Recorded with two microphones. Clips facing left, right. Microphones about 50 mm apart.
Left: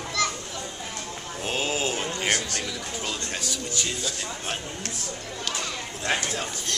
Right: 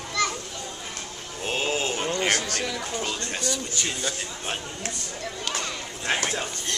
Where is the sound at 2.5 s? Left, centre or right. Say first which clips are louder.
Right 3 dB; right.